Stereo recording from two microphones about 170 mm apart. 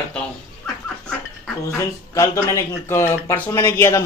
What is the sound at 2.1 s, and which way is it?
Speech, 20° left (ahead or behind).